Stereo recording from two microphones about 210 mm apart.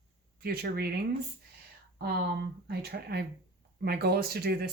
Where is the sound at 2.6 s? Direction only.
50° right (ahead or behind).